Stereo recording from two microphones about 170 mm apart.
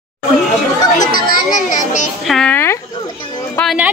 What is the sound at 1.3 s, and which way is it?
Children playing, 50° left (ahead or behind).